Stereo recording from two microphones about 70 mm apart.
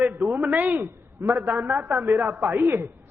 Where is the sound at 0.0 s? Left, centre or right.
Right.